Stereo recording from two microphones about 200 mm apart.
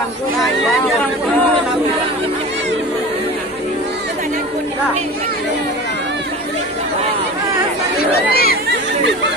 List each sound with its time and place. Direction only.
8.3 s chatter: 50° left (ahead or behind)